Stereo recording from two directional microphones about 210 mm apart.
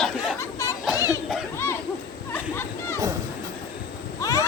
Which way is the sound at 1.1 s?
Centre (ahead or behind).